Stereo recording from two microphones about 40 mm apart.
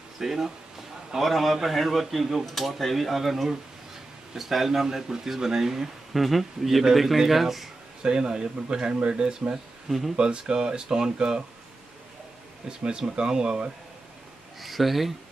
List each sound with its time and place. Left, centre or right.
0.2 s speech: centre
8.0 s speech: centre
9.8 s speech: centre
10.1 s speech: right
12.6 s speech: right
14.6 s speech: centre